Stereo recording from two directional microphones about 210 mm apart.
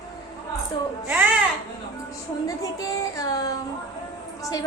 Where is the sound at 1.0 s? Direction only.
10° right (ahead or behind).